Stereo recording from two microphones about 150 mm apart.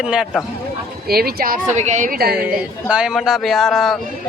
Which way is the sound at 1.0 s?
90° right.